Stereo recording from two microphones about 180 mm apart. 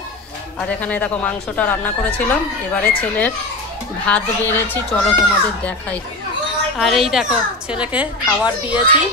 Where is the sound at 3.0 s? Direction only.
10° left (ahead or behind).